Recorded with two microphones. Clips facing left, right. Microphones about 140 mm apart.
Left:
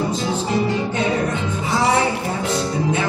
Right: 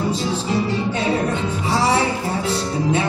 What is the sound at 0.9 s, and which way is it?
Music, 35° right (ahead or behind).